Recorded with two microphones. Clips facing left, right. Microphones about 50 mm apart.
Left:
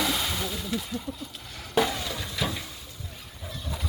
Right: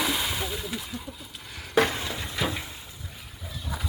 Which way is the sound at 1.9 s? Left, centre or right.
Right.